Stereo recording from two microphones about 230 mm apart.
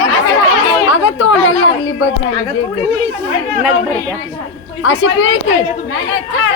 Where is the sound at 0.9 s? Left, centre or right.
Left.